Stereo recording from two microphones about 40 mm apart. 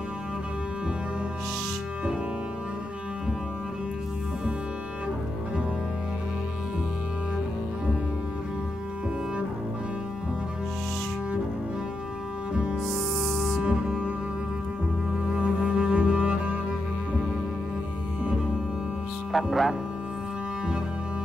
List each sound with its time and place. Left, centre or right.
12.8 s music: centre
13.6 s cello: right
15.4 s cello: right
19.3 s speech: centre